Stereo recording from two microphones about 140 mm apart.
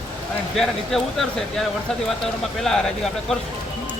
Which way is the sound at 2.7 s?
Centre (ahead or behind).